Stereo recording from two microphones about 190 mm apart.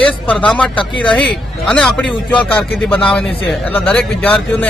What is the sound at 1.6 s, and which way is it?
Speech, 5° left (ahead or behind).